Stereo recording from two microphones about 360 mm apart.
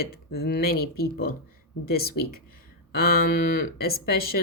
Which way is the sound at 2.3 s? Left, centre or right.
Left.